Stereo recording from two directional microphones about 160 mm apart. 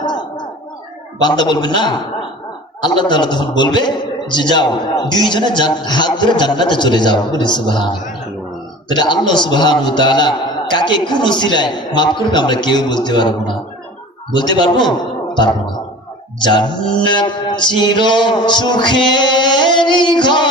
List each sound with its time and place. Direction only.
1.2 s a man's voice: 25° left (ahead or behind)
16.5 s a man's voice: 25° left (ahead or behind)